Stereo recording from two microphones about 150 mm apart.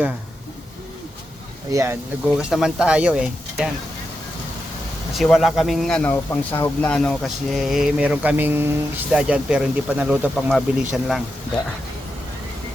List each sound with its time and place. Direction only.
1.7 s speech: 15° right (ahead or behind)
2.4 s speech: 5° right (ahead or behind)
5.1 s speech: centre (ahead or behind)